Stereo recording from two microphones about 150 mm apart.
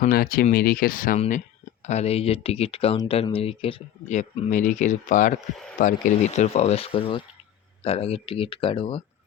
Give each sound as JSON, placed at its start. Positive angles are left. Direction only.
{"t": 0.0, "sound": "speech", "side_deg": 75}
{"t": 1.9, "sound": "speech", "side_deg": 45}
{"t": 4.1, "sound": "speech", "side_deg": 50}